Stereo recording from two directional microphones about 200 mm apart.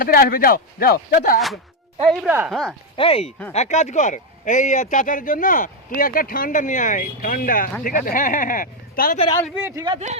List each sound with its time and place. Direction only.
0.0 s speech: 45° left (ahead or behind)
2.0 s speech: centre (ahead or behind)
2.9 s speech: 30° left (ahead or behind); by 9.1 s 45° left (ahead or behind)
9.6 s speech: 10° right (ahead or behind)
9.8 s speech: 30° right (ahead or behind)